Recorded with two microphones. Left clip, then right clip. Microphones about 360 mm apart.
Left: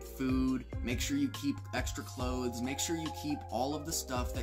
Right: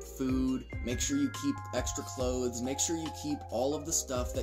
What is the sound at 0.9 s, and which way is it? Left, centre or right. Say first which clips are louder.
Speech: right 2 dB; centre.